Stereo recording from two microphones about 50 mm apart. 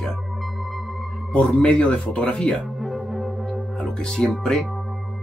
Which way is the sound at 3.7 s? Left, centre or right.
Centre.